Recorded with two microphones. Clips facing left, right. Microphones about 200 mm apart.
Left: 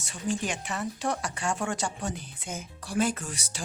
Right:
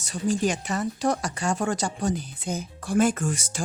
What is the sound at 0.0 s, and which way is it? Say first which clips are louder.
Speech: right 6 dB; 40° right (ahead or behind).